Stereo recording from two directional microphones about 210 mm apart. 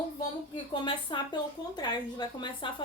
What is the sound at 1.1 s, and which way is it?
A woman's voice, 20° left (ahead or behind).